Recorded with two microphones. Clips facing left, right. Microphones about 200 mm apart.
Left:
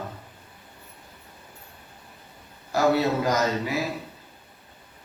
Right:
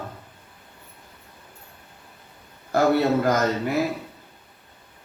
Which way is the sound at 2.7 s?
55° right (ahead or behind).